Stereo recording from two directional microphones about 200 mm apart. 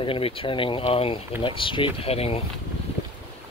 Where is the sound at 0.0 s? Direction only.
25° left (ahead or behind).